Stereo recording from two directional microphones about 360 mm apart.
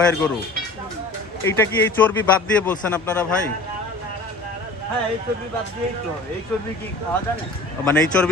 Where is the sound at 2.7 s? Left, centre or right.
Centre.